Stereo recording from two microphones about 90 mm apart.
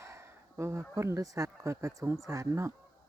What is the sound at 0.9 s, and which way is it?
Speech, 35° right (ahead or behind).